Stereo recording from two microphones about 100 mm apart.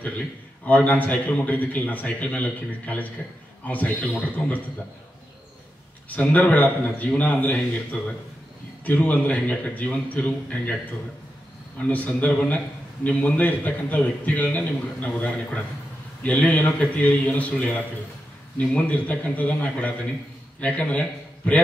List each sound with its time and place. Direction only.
0.7 s a man's voice: 15° left (ahead or behind)
6.0 s a man's voice: 15° left (ahead or behind)
11.9 s a man's voice: 15° left (ahead or behind)